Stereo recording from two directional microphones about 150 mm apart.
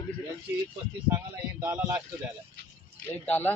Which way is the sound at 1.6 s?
10° right (ahead or behind).